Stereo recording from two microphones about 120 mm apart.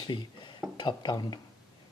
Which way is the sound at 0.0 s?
40° left (ahead or behind).